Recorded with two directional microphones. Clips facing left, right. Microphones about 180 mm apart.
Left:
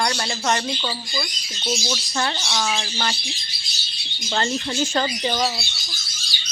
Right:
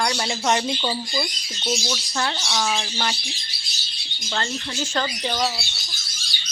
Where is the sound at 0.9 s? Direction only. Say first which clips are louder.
Right 3 dB; 20° right (ahead or behind).